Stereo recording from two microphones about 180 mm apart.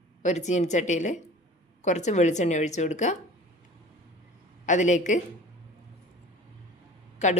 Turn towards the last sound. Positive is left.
turn(degrees=40)  # may be behind; listen again after turning